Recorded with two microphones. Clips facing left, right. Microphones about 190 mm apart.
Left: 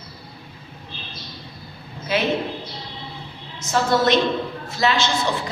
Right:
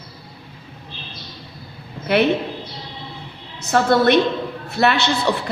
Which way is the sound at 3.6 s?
60° right (ahead or behind).